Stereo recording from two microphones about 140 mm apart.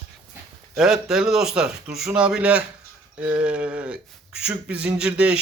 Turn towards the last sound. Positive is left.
turn(degrees=-5)  # may be behind; listen again after turning